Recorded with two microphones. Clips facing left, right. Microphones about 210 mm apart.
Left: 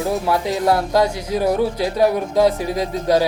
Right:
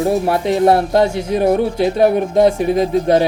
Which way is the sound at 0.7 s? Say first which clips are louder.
Right 2 dB; 25° right (ahead or behind).